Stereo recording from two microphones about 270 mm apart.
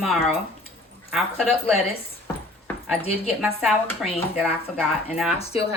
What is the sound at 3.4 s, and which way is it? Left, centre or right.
A woman's voice, centre.